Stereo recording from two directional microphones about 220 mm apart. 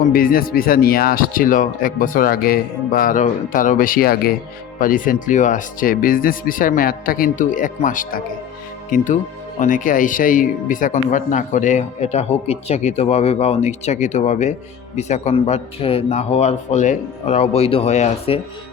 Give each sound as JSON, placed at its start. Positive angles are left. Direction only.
{"t": 0.1, "sound": "a man's voice", "side_deg": 40}